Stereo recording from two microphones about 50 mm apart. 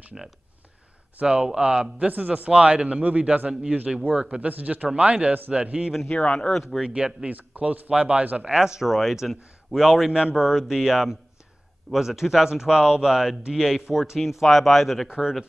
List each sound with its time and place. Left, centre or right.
1.2 s a man's voice: centre
2.0 s a man's voice: right
6.1 s speech: left
6.5 s speech: centre
6.8 s a man's voice: right
7.2 s a man's voice: right
7.9 s a man's voice: right
8.5 s a man's voice: centre
15.0 s a man's voice: centre